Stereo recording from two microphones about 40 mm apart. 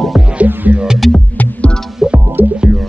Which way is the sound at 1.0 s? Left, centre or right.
Centre.